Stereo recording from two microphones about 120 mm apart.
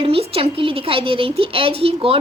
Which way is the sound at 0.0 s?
50° right (ahead or behind).